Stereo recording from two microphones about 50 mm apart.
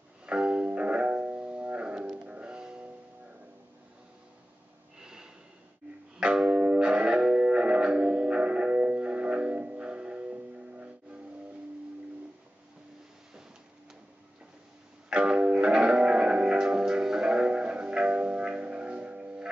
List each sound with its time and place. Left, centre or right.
0.3 s music: right
4.9 s snort: centre
6.1 s music: centre
15.0 s music: right